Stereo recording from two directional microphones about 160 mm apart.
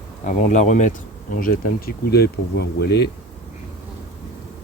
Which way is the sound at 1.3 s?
65° left (ahead or behind).